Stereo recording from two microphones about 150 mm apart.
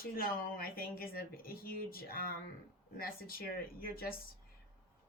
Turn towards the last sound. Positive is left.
turn(degrees=85)